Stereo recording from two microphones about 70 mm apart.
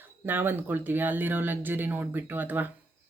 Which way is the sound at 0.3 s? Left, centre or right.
Right.